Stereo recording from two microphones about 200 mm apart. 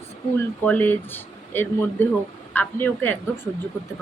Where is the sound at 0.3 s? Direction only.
10° left (ahead or behind).